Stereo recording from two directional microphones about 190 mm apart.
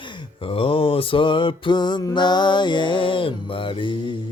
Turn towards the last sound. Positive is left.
turn(degrees=25)  # may be behind; listen again after turning